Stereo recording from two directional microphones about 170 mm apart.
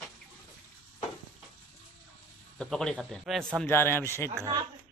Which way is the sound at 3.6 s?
15° left (ahead or behind).